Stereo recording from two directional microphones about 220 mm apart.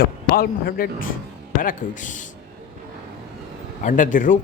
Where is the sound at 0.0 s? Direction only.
45° left (ahead or behind).